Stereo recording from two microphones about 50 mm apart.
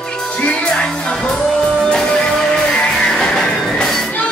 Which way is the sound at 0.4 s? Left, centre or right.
Left.